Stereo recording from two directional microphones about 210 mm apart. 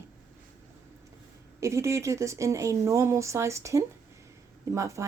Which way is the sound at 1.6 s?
15° right (ahead or behind).